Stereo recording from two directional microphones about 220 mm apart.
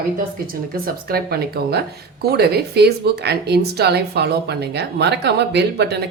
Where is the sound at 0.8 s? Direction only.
45° right (ahead or behind).